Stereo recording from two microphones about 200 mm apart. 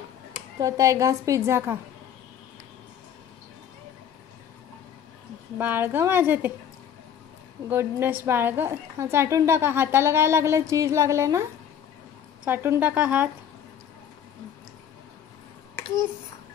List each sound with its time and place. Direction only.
0.6 s a woman's voice: 15° right (ahead or behind)
5.6 s a woman's voice: 10° right (ahead or behind)
7.7 s a woman's voice: 10° right (ahead or behind)
12.4 s a woman's voice: 10° right (ahead or behind)